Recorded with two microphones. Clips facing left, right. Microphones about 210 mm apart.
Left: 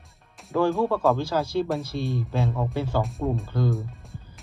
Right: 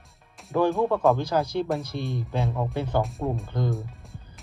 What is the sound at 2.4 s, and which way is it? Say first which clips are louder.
Speech: even; centre (ahead or behind).